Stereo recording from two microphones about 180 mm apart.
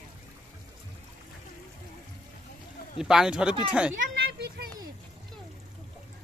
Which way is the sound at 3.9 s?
55° right (ahead or behind).